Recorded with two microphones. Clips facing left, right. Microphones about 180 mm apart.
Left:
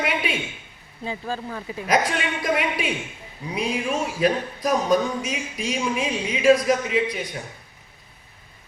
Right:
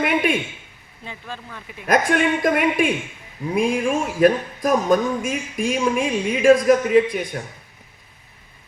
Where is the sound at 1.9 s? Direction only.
50° right (ahead or behind).